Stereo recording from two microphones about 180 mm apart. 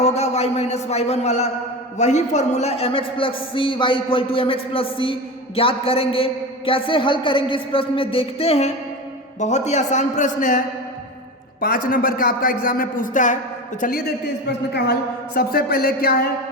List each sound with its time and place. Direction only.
0.0 s a man's voice: 35° left (ahead or behind)
11.6 s a man's voice: 50° left (ahead or behind)
14.7 s speech: 65° left (ahead or behind)